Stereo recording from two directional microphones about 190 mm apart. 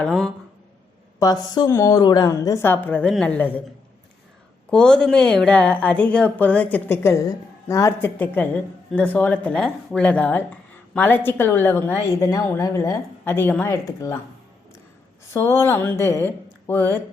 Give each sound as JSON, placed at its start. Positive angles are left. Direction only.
{"t": 0.0, "sound": "speech", "side_deg": 0}
{"t": 1.2, "sound": "a woman's voice", "side_deg": 20}
{"t": 4.7, "sound": "a woman's voice", "side_deg": 5}
{"t": 15.3, "sound": "a woman's voice", "side_deg": 15}